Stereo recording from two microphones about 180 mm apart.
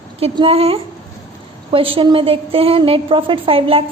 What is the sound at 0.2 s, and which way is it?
A woman's voice, 35° right (ahead or behind).